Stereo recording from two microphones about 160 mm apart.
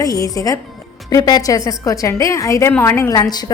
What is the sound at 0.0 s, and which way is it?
A woman's voice, 20° left (ahead or behind).